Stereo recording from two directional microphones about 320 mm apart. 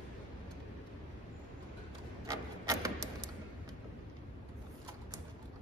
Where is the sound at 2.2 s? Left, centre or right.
Centre.